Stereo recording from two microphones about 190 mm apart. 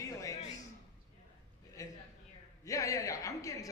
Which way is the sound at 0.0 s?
15° left (ahead or behind).